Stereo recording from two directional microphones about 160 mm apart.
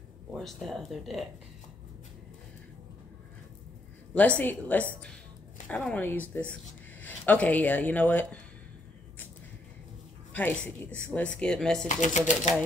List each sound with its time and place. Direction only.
0.3 s speech: centre (ahead or behind)
4.1 s a woman's voice: 10° left (ahead or behind)
10.9 s speech: 10° left (ahead or behind)
11.9 s speech: 50° left (ahead or behind)